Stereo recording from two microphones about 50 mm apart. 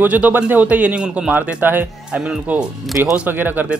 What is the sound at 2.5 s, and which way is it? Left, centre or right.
Speech, right.